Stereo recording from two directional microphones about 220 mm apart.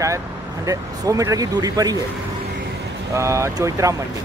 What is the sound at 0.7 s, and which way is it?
Speech, 15° right (ahead or behind).